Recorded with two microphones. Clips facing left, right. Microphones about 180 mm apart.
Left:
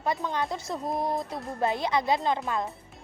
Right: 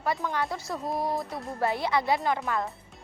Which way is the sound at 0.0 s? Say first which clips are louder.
Even; 20° left (ahead or behind).